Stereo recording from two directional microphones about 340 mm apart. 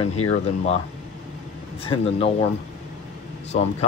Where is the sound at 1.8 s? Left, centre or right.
Centre.